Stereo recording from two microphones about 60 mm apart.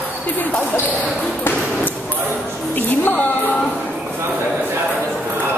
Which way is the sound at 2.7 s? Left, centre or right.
Left.